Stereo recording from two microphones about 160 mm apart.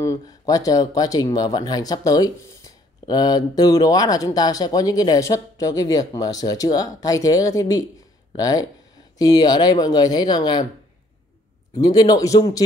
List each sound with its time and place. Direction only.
0.0 s speech: 20° left (ahead or behind)
11.7 s speech: 25° left (ahead or behind)